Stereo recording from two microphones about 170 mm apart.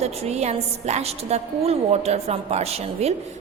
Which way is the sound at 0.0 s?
40° right (ahead or behind).